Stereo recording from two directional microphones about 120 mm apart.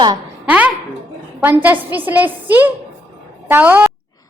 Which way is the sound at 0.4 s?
10° right (ahead or behind).